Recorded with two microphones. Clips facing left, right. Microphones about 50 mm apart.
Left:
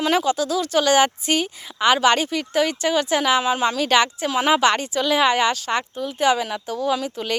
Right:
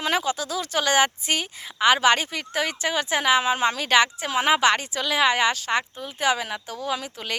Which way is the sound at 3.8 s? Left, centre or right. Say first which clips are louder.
Left 2 dB; centre.